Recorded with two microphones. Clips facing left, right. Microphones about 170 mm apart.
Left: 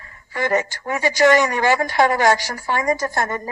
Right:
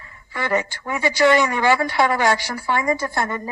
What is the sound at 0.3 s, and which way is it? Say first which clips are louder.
A woman's voice: left 2 dB; 45° left (ahead or behind).